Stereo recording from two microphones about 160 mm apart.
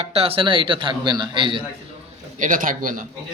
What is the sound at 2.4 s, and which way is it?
Speech, 55° right (ahead or behind).